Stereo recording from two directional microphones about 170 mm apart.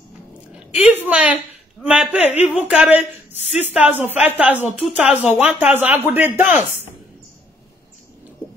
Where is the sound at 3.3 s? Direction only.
40° left (ahead or behind).